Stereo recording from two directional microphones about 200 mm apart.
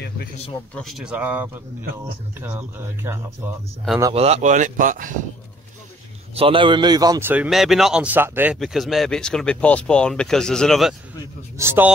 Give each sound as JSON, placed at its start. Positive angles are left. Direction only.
{"t": 0.7, "sound": "a man's voice", "side_deg": 0}
{"t": 4.1, "sound": "speech", "side_deg": -30}
{"t": 6.3, "sound": "a man's voice", "side_deg": -25}
{"t": 11.5, "sound": "a man's voice", "side_deg": -10}